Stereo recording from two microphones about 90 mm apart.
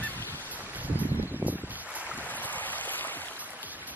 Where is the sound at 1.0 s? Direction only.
20° right (ahead or behind).